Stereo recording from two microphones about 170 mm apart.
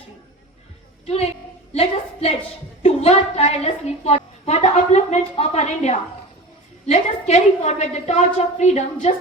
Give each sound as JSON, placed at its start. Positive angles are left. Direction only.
{"t": 1.0, "sound": "speech", "side_deg": 35}
{"t": 1.7, "sound": "a sound", "side_deg": 35}
{"t": 2.8, "sound": "a woman's voice", "side_deg": 40}